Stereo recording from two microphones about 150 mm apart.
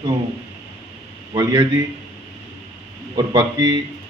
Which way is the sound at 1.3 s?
30° right (ahead or behind).